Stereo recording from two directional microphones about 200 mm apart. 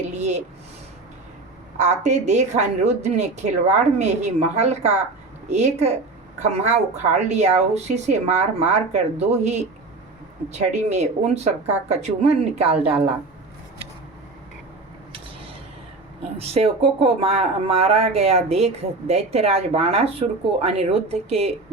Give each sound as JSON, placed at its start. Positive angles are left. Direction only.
{"t": 0.2, "sound": "a sound", "side_deg": -35}
{"t": 1.8, "sound": "speech", "side_deg": -35}
{"t": 16.4, "sound": "speech", "side_deg": -30}